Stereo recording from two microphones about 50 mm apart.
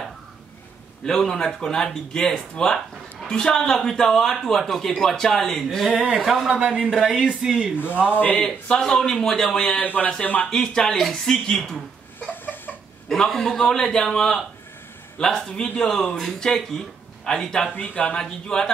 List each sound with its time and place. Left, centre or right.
1.0 s a man's voice: centre
5.9 s speech: centre
7.7 s speech: left
8.6 s a man's voice: centre
9.8 s speech: left
10.5 s a man's voice: centre
12.2 s a sound: left
13.1 s a man's voice: centre
17.8 s speech: left
18.1 s a man's voice: centre